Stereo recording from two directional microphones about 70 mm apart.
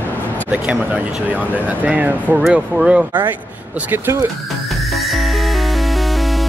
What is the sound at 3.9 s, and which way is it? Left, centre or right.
Speech, right.